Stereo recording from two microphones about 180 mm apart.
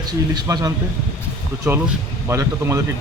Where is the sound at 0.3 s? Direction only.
20° right (ahead or behind).